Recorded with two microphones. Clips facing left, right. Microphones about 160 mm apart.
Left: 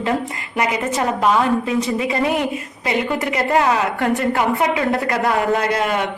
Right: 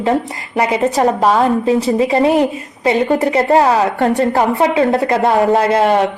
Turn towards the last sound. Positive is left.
turn(degrees=-30)  # may be behind; listen again after turning